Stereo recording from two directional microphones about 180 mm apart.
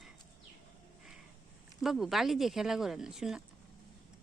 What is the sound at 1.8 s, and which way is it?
Speech, centre (ahead or behind).